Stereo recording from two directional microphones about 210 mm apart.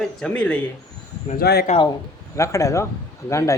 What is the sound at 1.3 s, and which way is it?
Speech, 50° left (ahead or behind).